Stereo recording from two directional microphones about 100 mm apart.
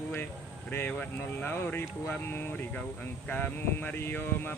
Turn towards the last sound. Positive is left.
turn(degrees=20)  # may be behind; listen again after turning